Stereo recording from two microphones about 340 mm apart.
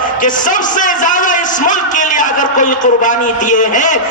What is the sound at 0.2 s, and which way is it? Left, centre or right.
A man's voice, left.